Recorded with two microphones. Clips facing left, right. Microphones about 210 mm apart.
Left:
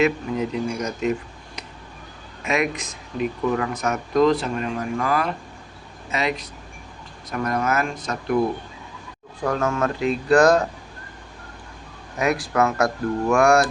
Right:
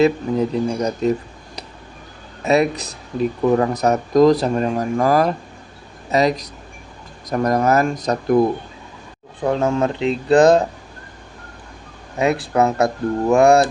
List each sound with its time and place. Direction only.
0.0 s speech: 35° right (ahead or behind)
2.4 s speech: 35° right (ahead or behind)
10.3 s speech: 35° right (ahead or behind)
12.1 s speech: 30° right (ahead or behind)